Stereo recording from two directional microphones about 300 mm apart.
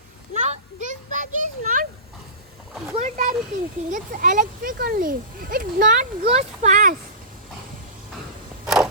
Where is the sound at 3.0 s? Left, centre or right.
Right.